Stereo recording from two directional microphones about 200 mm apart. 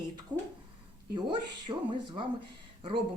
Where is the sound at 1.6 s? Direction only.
25° right (ahead or behind).